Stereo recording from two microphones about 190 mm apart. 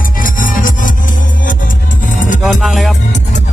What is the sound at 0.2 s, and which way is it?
Music, 45° left (ahead or behind).